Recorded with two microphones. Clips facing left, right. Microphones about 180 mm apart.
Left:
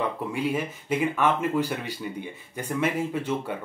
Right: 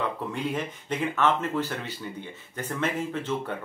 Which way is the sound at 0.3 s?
10° left (ahead or behind).